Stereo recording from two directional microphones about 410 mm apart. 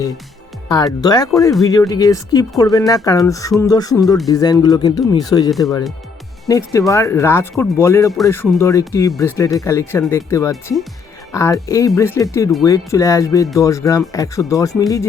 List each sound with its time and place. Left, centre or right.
0.7 s speech: centre